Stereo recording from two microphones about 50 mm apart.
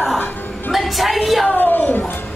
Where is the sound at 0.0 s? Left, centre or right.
Centre.